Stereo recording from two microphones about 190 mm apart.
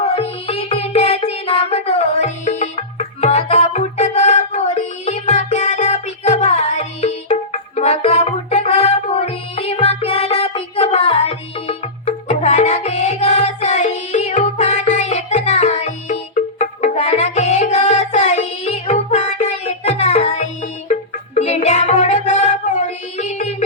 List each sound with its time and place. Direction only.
0.0 s music: 30° left (ahead or behind)